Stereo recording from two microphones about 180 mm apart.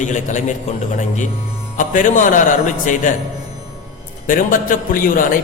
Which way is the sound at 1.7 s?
45° left (ahead or behind).